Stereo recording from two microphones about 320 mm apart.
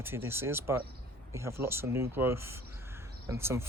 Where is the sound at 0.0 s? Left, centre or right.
Centre.